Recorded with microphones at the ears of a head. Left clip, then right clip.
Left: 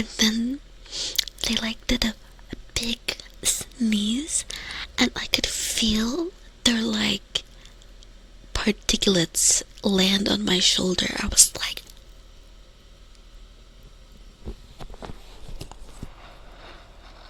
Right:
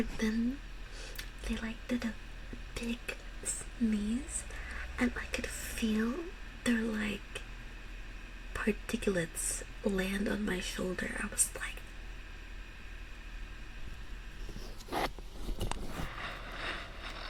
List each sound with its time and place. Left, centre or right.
0.0 s whispering: left
8.5 s a woman's voice: left
15.7 s a sound: right